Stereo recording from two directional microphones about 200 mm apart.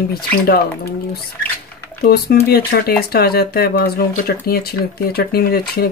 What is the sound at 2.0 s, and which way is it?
Speech, 50° left (ahead or behind).